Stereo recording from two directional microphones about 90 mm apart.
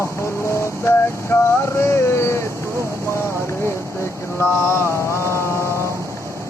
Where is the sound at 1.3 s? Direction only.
30° left (ahead or behind).